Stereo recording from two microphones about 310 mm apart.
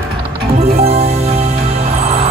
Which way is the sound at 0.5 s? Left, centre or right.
Centre.